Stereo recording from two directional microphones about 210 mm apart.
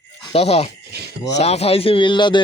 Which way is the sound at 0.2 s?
30° left (ahead or behind).